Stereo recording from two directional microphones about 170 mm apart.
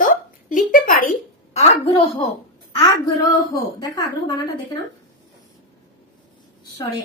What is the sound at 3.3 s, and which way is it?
Speech, 25° left (ahead or behind).